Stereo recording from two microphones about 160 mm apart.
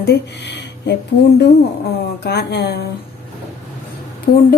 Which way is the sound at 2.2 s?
90° left.